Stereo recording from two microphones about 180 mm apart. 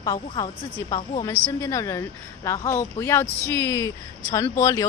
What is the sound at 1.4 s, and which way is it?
Speech, 15° left (ahead or behind).